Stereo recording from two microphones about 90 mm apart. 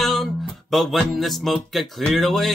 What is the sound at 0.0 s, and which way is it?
Music, centre (ahead or behind).